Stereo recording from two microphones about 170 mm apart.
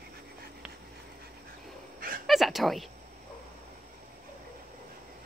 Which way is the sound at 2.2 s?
Centre (ahead or behind).